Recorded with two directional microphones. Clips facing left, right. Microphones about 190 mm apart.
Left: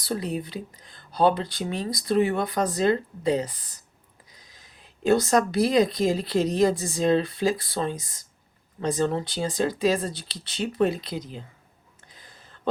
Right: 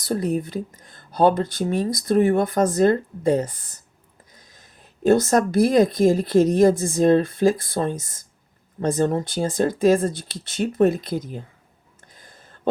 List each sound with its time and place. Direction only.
0.0 s speech: 45° right (ahead or behind)
5.0 s speech: 50° right (ahead or behind)